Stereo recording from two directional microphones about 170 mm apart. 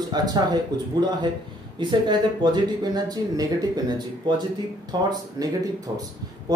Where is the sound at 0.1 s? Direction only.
25° right (ahead or behind).